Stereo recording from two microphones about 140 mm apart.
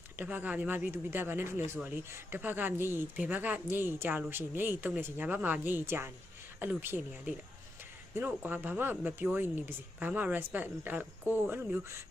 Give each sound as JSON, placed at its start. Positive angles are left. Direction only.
{"t": 0.2, "sound": "speech", "side_deg": -10}